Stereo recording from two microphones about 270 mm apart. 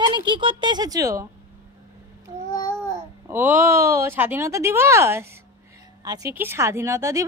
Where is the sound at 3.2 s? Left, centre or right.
Centre.